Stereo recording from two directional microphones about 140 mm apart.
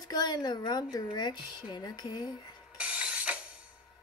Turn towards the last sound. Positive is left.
turn(degrees=-10)  # may be behind; listen again after turning